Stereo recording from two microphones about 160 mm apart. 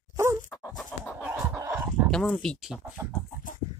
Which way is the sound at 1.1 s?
10° right (ahead or behind).